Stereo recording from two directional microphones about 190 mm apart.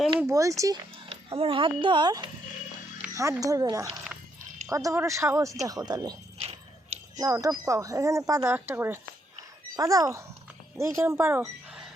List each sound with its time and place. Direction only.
0.2 s speech: 15° right (ahead or behind)
1.3 s speech: 30° right (ahead or behind); by 11.9 s 10° right (ahead or behind)